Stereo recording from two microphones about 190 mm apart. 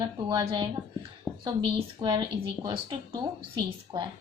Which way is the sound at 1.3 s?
5° left (ahead or behind).